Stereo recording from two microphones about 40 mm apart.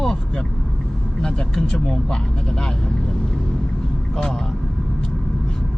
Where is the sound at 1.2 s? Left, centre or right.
Centre.